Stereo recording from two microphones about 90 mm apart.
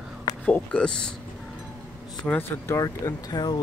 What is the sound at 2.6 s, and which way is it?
Speech, 30° left (ahead or behind).